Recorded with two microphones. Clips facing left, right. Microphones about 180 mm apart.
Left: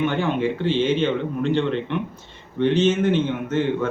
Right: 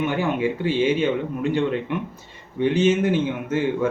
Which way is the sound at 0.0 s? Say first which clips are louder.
Left 1 dB; 10° right (ahead or behind).